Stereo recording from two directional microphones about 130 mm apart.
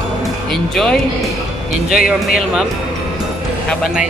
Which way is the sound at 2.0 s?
5° right (ahead or behind).